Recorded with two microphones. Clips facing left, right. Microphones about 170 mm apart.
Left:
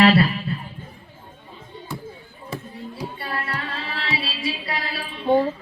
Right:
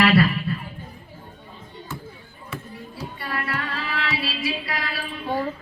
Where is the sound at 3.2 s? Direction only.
30° left (ahead or behind).